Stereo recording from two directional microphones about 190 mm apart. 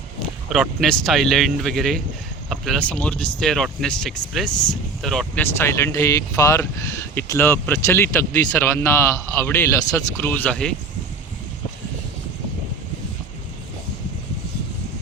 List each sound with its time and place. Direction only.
0.5 s speech: centre (ahead or behind)
4.5 s speech: 20° left (ahead or behind)
5.0 s speech: 5° left (ahead or behind)